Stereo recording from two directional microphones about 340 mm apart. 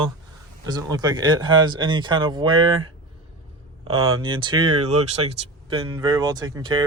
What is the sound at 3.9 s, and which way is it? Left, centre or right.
Speech, right.